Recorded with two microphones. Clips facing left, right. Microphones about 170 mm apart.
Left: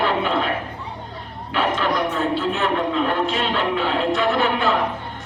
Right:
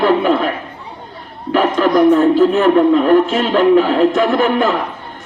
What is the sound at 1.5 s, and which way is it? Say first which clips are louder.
A man's voice: right 9 dB; 45° right (ahead or behind).